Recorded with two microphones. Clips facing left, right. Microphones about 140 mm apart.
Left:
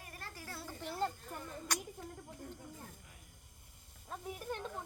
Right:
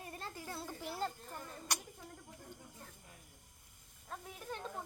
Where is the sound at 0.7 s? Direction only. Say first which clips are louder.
Left 4 dB; 5° right (ahead or behind).